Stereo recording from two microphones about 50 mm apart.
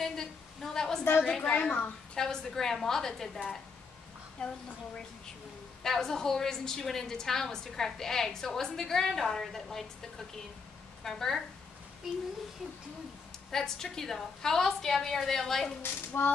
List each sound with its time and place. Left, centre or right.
0.0 s a sound: centre
1.2 s a woman's voice: centre
2.1 s a woman's voice: centre
4.4 s a child's voice: centre
5.8 s a woman's voice: centre
12.1 s speech: centre
13.5 s a woman's voice: centre
16.1 s a sound: left